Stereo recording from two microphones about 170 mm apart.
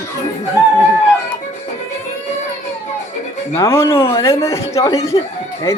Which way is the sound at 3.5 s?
15° left (ahead or behind).